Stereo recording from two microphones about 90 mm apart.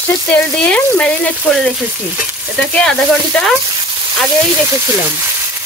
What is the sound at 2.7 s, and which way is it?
Frying, 10° left (ahead or behind).